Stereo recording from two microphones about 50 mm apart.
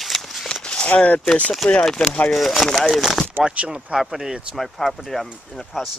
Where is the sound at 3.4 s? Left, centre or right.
Right.